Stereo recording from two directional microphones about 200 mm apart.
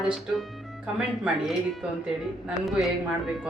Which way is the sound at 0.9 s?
5° right (ahead or behind).